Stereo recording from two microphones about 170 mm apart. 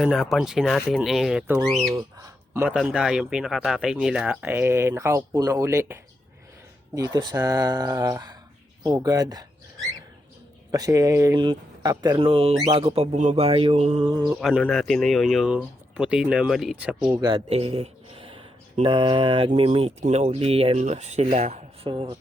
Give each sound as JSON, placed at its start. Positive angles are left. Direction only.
{"t": 0.0, "sound": "speech", "side_deg": 0}
{"t": 1.5, "sound": "speech", "side_deg": -20}
{"t": 2.2, "sound": "a sound", "side_deg": -15}
{"t": 2.7, "sound": "speech", "side_deg": -5}
{"t": 14.6, "sound": "speech", "side_deg": 0}
{"t": 17.1, "sound": "speech", "side_deg": -20}
{"t": 17.3, "sound": "speech", "side_deg": -35}